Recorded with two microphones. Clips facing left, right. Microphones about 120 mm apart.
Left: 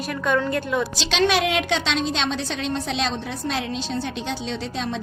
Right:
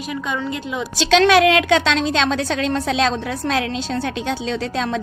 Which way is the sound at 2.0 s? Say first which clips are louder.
Right 5 dB; 90° right.